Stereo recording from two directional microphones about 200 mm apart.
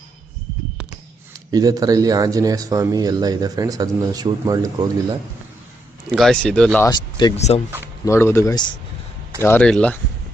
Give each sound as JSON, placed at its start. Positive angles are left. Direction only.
{"t": 1.5, "sound": "speech", "side_deg": -20}
{"t": 6.1, "sound": "speech", "side_deg": 0}
{"t": 6.8, "sound": "speech", "side_deg": 20}
{"t": 7.3, "sound": "speech", "side_deg": 35}
{"t": 8.0, "sound": "speech", "side_deg": 15}